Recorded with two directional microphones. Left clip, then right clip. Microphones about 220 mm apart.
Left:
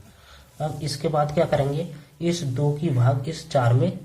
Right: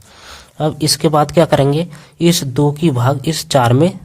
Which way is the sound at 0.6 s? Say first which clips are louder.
Right 12 dB; 45° right (ahead or behind).